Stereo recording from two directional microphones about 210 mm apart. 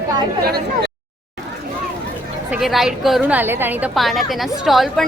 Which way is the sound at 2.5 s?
Centre (ahead or behind).